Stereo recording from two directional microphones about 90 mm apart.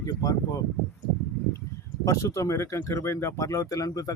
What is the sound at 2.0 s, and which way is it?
Speech, 35° left (ahead or behind).